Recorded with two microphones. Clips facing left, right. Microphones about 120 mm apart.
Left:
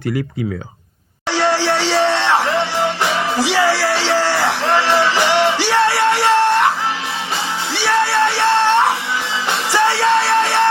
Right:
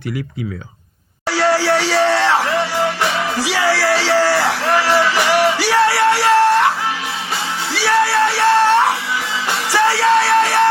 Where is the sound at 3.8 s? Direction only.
90° right.